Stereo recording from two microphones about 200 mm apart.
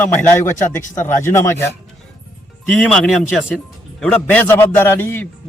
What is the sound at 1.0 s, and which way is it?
Speech, 10° left (ahead or behind).